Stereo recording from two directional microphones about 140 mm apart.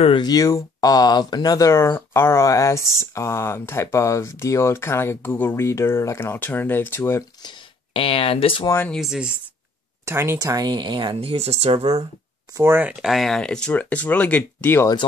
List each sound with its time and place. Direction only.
0.0 s speech: 35° left (ahead or behind); by 7.2 s 20° left (ahead or behind)
7.4 s speech: 40° left (ahead or behind)
8.6 s speech: 15° left (ahead or behind)
8.9 s speech: 5° right (ahead or behind)
10.0 s speech: 20° right (ahead or behind); by 11.9 s 50° right (ahead or behind)
12.5 s speech: 15° right (ahead or behind); by 14.9 s 15° left (ahead or behind)